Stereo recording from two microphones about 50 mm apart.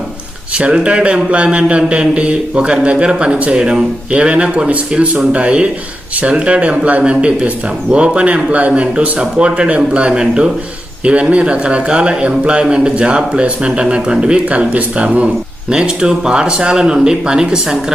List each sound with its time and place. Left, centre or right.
0.5 s a man's voice: right